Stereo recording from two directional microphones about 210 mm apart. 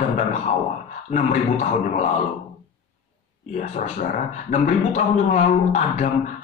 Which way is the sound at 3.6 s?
35° left (ahead or behind).